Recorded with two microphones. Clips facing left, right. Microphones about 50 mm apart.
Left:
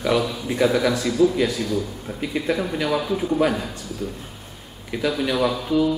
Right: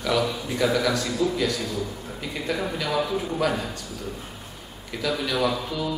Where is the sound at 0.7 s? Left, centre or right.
Centre.